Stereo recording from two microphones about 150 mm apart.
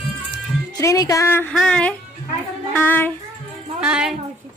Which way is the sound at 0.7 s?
20° left (ahead or behind).